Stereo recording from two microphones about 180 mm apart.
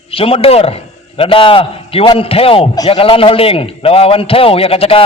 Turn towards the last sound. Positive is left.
turn(degrees=30)  # may be behind; listen again after turning